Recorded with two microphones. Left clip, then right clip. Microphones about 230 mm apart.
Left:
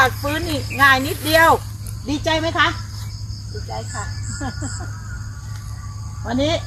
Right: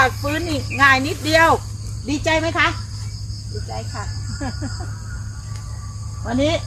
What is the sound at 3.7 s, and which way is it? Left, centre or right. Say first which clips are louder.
Speech: left 2 dB; centre.